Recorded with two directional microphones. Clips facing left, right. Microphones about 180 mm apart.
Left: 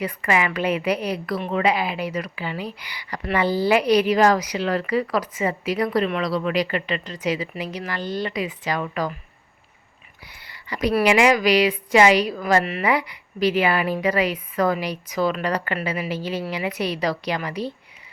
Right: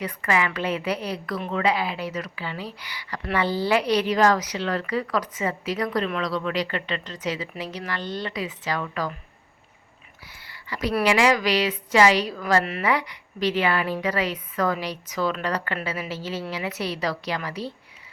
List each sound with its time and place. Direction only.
0.0 s speech: 10° left (ahead or behind)
10.4 s a sound: 15° left (ahead or behind)
11.0 s speech: 15° left (ahead or behind)